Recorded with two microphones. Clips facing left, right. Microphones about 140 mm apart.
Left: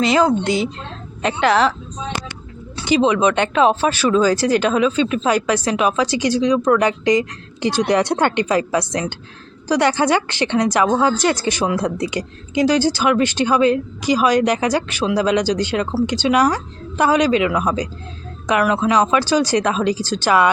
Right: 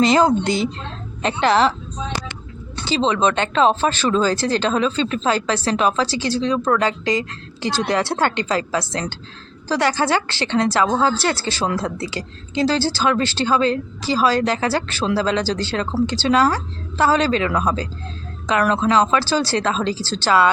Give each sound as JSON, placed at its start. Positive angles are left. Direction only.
{"t": 0.0, "sound": "a woman's voice", "side_deg": -35}
{"t": 0.4, "sound": "speech", "side_deg": 10}
{"t": 1.2, "sound": "speech", "side_deg": -30}
{"t": 2.8, "sound": "speech", "side_deg": 15}